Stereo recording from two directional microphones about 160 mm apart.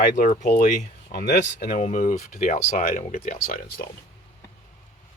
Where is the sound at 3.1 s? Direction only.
60° left (ahead or behind).